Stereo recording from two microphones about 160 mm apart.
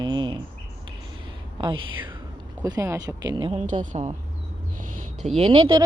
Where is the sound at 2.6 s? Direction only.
20° right (ahead or behind).